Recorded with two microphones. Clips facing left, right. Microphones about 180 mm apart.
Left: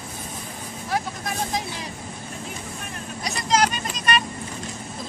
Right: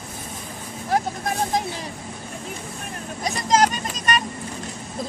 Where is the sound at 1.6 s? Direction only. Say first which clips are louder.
Right 4 dB; 50° right (ahead or behind).